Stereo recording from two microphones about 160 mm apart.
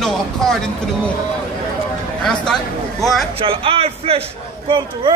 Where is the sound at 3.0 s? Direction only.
Centre (ahead or behind).